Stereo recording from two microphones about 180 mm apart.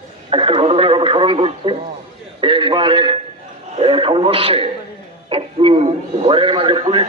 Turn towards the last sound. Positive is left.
turn(degrees=-30)  # may be behind; listen again after turning